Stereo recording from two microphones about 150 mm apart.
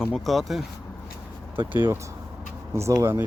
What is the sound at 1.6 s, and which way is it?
Speech, 15° right (ahead or behind).